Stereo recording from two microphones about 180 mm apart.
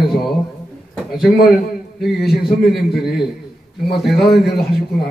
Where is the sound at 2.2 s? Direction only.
60° left (ahead or behind).